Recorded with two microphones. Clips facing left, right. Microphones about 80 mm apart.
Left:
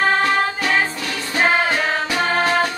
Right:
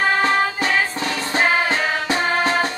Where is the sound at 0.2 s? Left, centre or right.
Right.